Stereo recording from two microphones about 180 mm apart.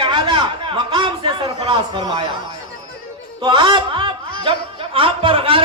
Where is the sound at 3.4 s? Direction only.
25° right (ahead or behind).